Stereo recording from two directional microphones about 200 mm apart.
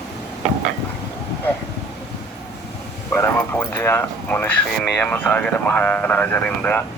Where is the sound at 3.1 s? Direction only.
10° left (ahead or behind).